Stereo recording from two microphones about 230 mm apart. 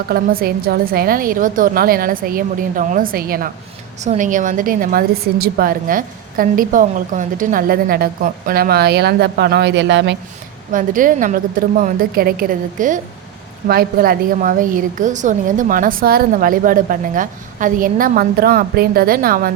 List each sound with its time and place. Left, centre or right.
0.1 s a woman's voice: right
10.7 s a woman's voice: right